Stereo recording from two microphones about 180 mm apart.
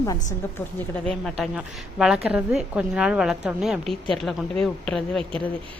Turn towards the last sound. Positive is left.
turn(degrees=5)  # may be behind; listen again after turning